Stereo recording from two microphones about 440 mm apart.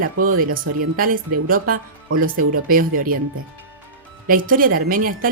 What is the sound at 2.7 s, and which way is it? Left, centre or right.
Speech, centre.